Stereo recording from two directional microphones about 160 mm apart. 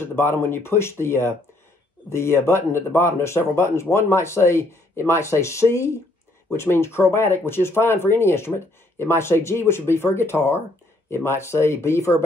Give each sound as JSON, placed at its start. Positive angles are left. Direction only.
{"t": 0.0, "sound": "speech", "side_deg": 15}